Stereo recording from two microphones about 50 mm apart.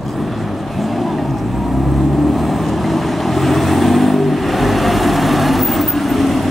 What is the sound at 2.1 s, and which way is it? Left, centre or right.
Vehicle, centre.